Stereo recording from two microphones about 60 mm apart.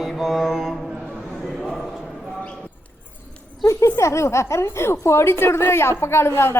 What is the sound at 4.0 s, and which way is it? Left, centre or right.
A woman's voice, left.